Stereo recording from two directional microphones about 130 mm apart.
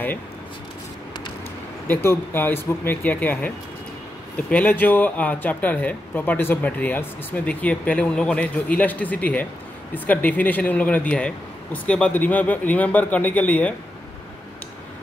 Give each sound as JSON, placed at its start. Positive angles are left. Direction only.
{"t": 1.9, "sound": "speech", "side_deg": 15}